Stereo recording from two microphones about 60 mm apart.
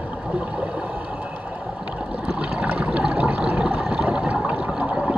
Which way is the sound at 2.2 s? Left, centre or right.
Centre.